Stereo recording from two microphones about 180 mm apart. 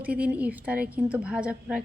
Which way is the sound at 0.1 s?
5° right (ahead or behind).